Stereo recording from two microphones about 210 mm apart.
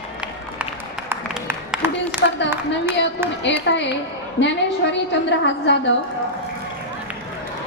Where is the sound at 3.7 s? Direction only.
55° left (ahead or behind).